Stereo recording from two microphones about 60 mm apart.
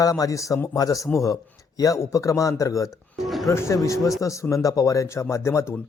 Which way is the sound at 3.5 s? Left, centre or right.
Left.